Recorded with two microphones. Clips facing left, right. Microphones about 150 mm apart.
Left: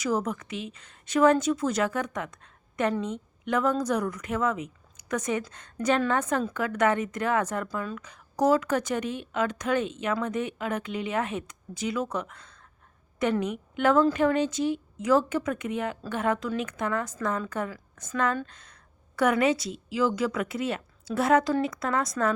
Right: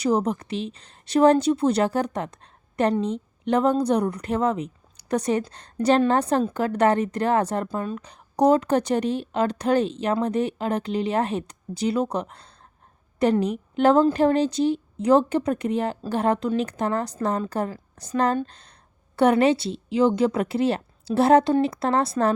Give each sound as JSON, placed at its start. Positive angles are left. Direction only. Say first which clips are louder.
{"t": 0.0, "sound": "speech", "louder": "right 6 dB", "side_deg": -30}
{"t": 4.9, "sound": "a sound", "louder": "right 6 dB", "side_deg": -35}
{"t": 5.5, "sound": "speech", "louder": "right 6 dB", "side_deg": -35}